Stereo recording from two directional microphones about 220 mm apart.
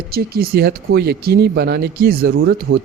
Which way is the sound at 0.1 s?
45° right (ahead or behind).